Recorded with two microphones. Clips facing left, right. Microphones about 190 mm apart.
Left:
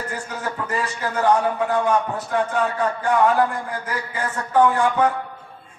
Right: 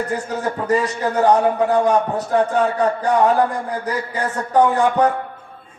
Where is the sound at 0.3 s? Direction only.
35° right (ahead or behind).